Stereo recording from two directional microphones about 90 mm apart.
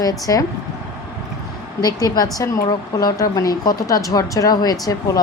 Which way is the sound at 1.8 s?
50° left (ahead or behind).